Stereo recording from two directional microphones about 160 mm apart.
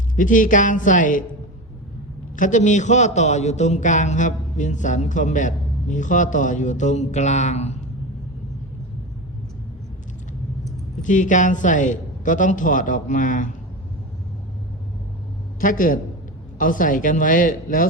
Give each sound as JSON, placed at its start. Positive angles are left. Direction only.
{"t": 0.2, "sound": "a man's voice", "side_deg": 55}
{"t": 2.3, "sound": "a man's voice", "side_deg": 50}
{"t": 11.0, "sound": "a man's voice", "side_deg": 50}
{"t": 15.6, "sound": "speech", "side_deg": 60}